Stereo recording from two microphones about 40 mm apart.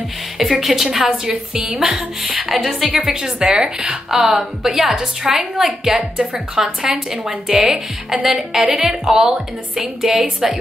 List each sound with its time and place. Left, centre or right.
0.4 s a woman's voice: centre
1.7 s speech: centre
2.4 s a woman's voice: centre
4.1 s a woman's voice: centre
6.3 s speech: right
6.8 s a woman's voice: centre